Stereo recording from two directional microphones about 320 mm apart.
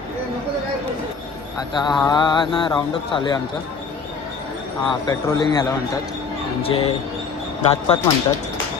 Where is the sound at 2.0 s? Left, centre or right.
Centre.